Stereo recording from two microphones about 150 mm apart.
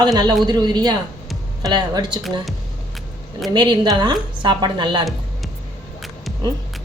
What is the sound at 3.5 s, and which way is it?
A woman's voice, 30° right (ahead or behind).